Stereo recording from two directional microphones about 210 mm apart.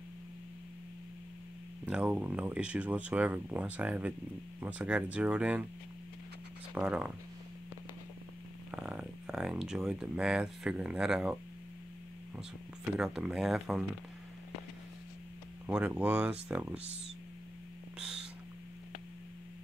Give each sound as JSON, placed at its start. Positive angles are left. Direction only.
{"t": 1.9, "sound": "speech", "side_deg": -5}
{"t": 6.7, "sound": "speech", "side_deg": -5}
{"t": 8.7, "sound": "speech", "side_deg": -5}
{"t": 12.9, "sound": "speech", "side_deg": -5}
{"t": 15.6, "sound": "speech", "side_deg": -10}
{"t": 17.9, "sound": "a sound", "side_deg": -5}